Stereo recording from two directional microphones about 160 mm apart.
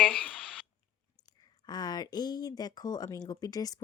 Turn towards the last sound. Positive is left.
turn(degrees=25)  # may be behind; listen again after turning